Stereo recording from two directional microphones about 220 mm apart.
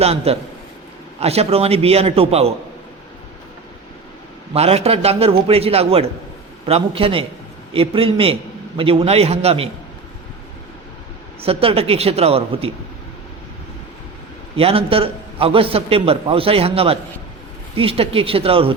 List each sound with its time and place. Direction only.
0.0 s a man's voice: 30° right (ahead or behind)
4.5 s a man's voice: 30° right (ahead or behind)
11.4 s a man's voice: 25° right (ahead or behind)
14.5 s a man's voice: 25° right (ahead or behind)